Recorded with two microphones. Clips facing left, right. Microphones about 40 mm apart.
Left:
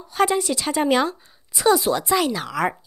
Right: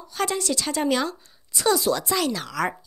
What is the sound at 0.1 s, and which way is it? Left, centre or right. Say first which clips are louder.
A woman's voice: left 5 dB; centre.